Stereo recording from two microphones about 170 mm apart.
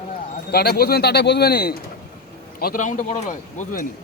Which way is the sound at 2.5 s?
55° left (ahead or behind).